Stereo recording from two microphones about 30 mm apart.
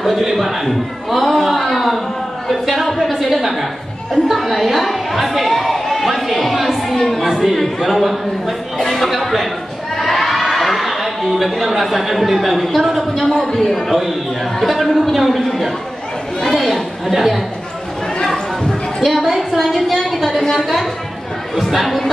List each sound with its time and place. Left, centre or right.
0.0 s a sound: centre
4.3 s a woman's voice: centre
5.5 s a sound: centre
7.4 s speech: centre
9.9 s a sound: centre
12.9 s speech: centre
13.3 s a man's voice: centre
13.6 s speech: centre
16.3 s chatter: centre
16.6 s chatter: centre
18.9 s a sound: centre
20.5 s speech: centre